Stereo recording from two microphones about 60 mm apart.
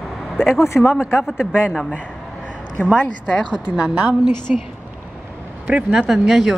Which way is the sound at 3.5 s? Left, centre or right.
Centre.